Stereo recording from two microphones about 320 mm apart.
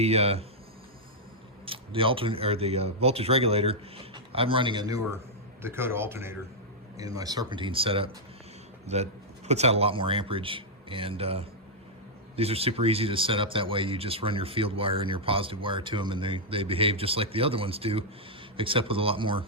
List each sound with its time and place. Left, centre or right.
0.0 s speech: centre
1.6 s speech: centre